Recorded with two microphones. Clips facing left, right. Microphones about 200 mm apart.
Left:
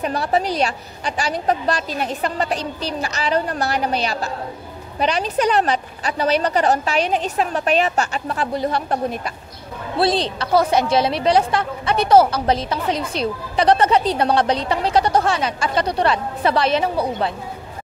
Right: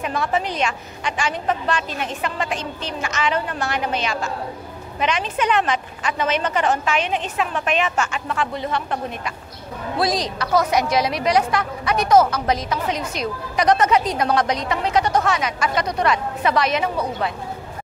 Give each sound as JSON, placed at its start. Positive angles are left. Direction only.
{"t": 0.0, "sound": "a woman's voice", "side_deg": 35}